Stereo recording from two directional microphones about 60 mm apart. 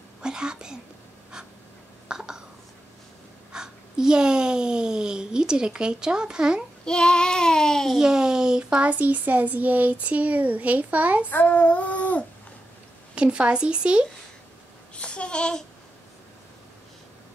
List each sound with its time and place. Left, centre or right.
0.2 s speech: centre
2.0 s a sound: centre
3.5 s a child's voice: centre
6.8 s child singing: centre
7.9 s speech: centre; by 11.2 s right
11.2 s child singing: left
13.1 s a child's voice: centre
15.0 s a child's voice: centre